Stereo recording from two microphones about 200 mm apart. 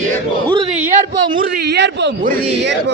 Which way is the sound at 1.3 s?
55° right (ahead or behind).